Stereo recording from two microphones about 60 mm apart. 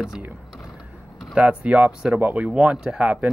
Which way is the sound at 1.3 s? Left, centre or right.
Right.